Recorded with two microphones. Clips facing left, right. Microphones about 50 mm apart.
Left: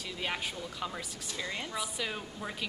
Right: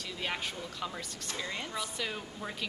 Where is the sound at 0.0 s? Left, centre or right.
Centre.